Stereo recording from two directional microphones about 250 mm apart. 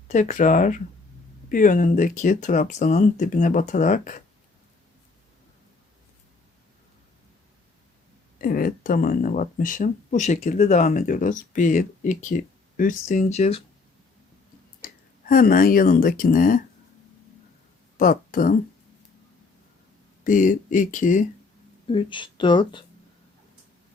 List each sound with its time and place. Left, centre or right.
0.1 s speech: left
8.4 s speech: left
15.3 s speech: left
17.9 s a woman's voice: left
20.2 s speech: left
21.8 s speech: left